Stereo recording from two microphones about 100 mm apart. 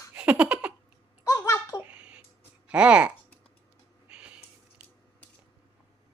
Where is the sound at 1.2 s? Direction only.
30° left (ahead or behind).